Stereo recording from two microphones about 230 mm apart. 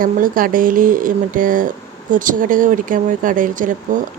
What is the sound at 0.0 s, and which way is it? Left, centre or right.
Speech, right.